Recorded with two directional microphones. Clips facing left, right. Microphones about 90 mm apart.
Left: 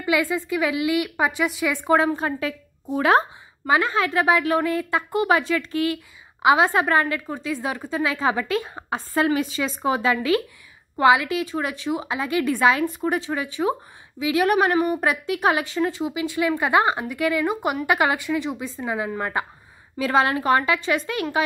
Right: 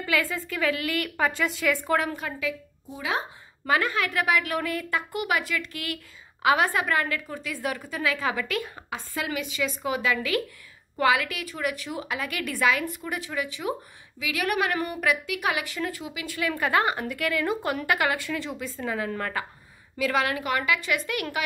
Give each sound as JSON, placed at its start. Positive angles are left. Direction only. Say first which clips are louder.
{"t": 0.0, "sound": "a woman's voice", "louder": "left 5 dB", "side_deg": 20}
{"t": 2.9, "sound": "speech", "louder": "left 11 dB", "side_deg": 55}
{"t": 3.6, "sound": "a woman's voice", "louder": "left 4 dB", "side_deg": 25}
{"t": 20.0, "sound": "a woman's voice", "louder": "left 5 dB", "side_deg": 30}